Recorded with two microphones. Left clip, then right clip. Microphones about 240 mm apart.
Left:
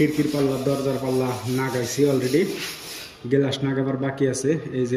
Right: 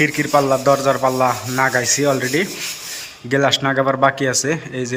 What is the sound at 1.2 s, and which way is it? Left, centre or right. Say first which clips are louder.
Speech: right 9 dB; centre.